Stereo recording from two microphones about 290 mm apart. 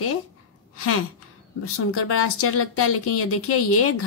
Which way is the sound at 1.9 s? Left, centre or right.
Left.